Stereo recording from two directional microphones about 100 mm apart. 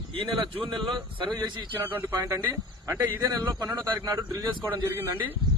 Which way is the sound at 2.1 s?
35° right (ahead or behind).